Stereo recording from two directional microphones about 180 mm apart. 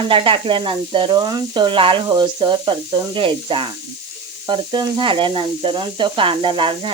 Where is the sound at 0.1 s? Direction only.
30° right (ahead or behind).